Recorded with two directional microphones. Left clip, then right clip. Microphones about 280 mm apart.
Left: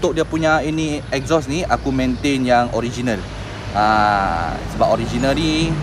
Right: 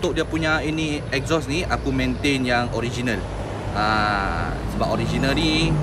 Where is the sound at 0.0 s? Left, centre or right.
Centre.